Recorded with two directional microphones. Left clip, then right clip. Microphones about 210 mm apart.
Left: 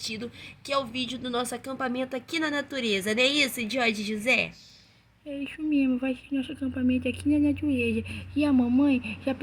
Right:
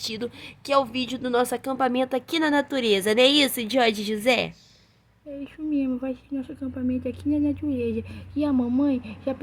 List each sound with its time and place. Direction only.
0.0 s speech: 55° right (ahead or behind)
5.4 s speech: centre (ahead or behind)